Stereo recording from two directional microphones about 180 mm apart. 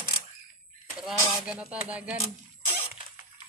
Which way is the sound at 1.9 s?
5° right (ahead or behind).